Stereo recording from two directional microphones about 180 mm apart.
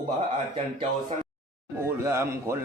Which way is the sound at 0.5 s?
30° right (ahead or behind).